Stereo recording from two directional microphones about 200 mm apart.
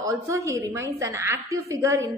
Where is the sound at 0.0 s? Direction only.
15° right (ahead or behind).